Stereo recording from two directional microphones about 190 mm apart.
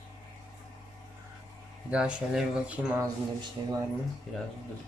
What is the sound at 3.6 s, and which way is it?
Speech, 25° right (ahead or behind).